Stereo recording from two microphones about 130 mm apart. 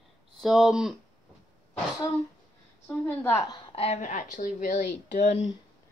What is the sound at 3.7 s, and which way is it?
Speech, 50° left (ahead or behind).